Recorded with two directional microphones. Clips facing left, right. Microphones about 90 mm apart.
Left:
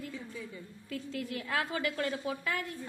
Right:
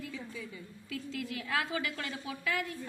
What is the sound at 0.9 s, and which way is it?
A woman's voice, 40° left (ahead or behind).